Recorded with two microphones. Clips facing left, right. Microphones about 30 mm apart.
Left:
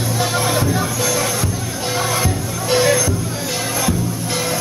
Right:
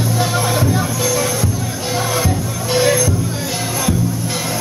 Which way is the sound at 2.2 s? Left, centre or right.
Centre.